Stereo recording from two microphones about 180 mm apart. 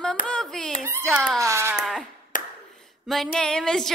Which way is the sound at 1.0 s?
Centre (ahead or behind).